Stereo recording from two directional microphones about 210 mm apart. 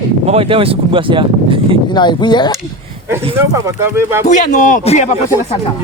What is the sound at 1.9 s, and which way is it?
Speech, 20° left (ahead or behind).